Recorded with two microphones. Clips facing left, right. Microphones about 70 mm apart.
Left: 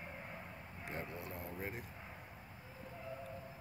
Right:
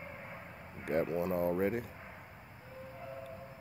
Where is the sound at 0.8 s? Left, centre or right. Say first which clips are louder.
Right 14 dB; right.